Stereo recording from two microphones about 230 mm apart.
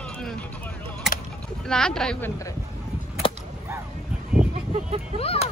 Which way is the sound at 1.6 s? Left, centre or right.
Centre.